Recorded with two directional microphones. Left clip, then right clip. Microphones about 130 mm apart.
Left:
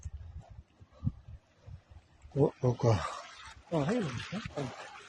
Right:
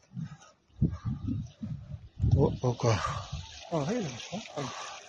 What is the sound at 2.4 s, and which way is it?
Speech, 10° left (ahead or behind).